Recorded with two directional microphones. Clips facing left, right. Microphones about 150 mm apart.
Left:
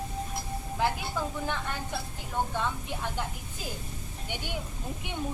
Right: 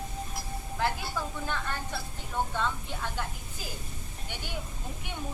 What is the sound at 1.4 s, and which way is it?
Speech, 15° left (ahead or behind).